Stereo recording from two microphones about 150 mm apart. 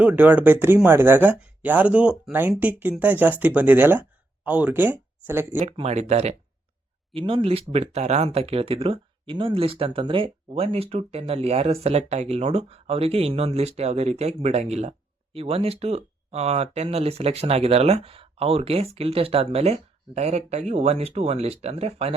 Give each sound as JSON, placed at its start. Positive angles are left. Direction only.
{"t": 0.0, "sound": "speech", "side_deg": -10}
{"t": 5.6, "sound": "speech", "side_deg": -40}
{"t": 7.1, "sound": "speech", "side_deg": -35}